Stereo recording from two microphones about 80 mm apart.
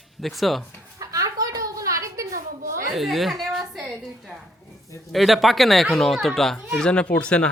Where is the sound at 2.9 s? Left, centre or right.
Centre.